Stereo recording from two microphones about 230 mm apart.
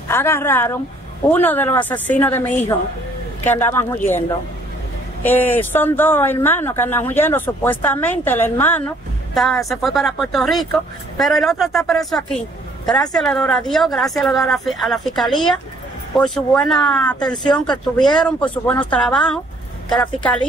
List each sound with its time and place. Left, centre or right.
0.1 s speech: centre
5.2 s a woman's voice: centre
17.5 s speech: centre
18.0 s a woman's voice: centre